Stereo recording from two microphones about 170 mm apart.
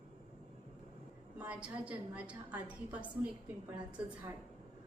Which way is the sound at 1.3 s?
10° right (ahead or behind).